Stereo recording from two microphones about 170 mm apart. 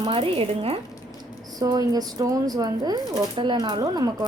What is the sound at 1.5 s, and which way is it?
Speech, 20° right (ahead or behind).